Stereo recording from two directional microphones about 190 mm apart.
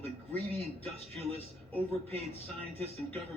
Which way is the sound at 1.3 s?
30° right (ahead or behind).